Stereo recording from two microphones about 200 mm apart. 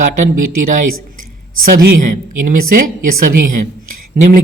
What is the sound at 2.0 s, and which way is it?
A woman's voice, 40° right (ahead or behind).